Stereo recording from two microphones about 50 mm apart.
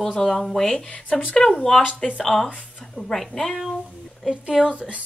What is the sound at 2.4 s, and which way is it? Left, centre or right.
Speech, right.